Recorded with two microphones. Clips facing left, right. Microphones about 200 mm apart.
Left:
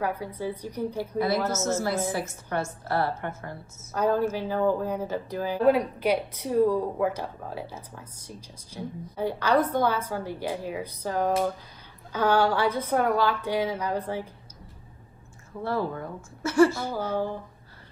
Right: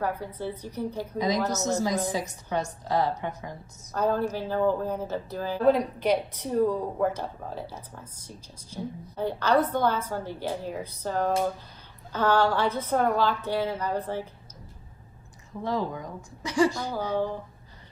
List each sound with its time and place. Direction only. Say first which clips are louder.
0.0 s speech: left 1 dB; 10° left (ahead or behind)
1.1 s a woman's voice: left 1 dB; 15° right (ahead or behind)
1.4 s speech: even; 10° left (ahead or behind)
2.8 s a woman's voice: right 3 dB; 15° right (ahead or behind)
3.7 s speech: left 1 dB; 10° left (ahead or behind)
8.6 s speech: right 1 dB; 10° left (ahead or behind)
15.6 s a woman's voice: left 1 dB; 15° right (ahead or behind)